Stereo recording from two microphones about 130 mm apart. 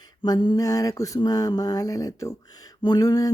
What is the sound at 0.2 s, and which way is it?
Speech, 35° left (ahead or behind).